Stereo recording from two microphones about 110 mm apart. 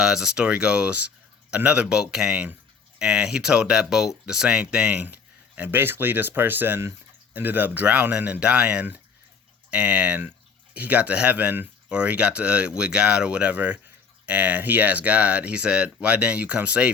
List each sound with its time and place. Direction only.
0.0 s speech: 5° right (ahead or behind)